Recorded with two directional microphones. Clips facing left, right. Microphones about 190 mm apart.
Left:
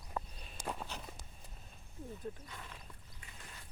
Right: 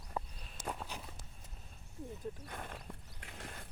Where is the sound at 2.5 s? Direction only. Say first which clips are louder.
Right 6 dB; 55° right (ahead or behind).